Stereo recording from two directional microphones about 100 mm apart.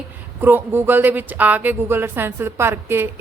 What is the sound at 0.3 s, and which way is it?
A woman's voice, 20° right (ahead or behind).